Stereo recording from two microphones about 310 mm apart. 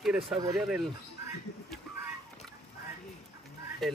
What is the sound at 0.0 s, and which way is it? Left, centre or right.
Speech, centre.